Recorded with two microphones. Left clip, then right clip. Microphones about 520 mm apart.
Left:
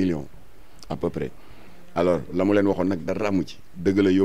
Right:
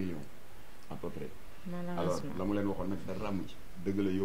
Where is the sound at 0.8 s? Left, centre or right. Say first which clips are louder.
Left 15 dB; left.